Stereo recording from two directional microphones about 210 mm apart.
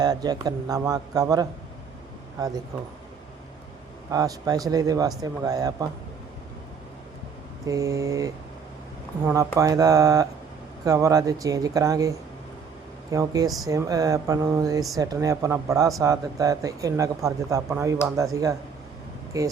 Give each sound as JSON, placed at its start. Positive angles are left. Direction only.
{"t": 0.0, "sound": "speech", "side_deg": -20}
{"t": 4.1, "sound": "speech", "side_deg": -15}
{"t": 7.7, "sound": "speech", "side_deg": -15}